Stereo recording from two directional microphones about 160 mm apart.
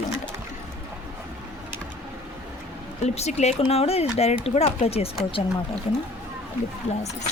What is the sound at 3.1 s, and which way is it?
Speech, 45° left (ahead or behind).